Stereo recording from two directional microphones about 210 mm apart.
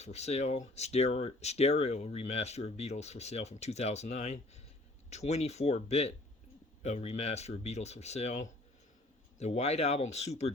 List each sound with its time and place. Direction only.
0.0 s speech: 30° left (ahead or behind)